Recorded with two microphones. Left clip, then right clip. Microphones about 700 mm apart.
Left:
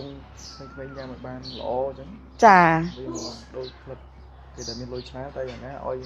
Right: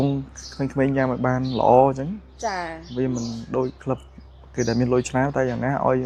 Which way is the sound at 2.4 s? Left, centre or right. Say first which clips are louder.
Left 14 dB; left.